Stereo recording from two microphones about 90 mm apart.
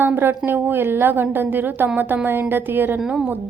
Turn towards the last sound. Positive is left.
turn(degrees=-10)  # may be behind; listen again after turning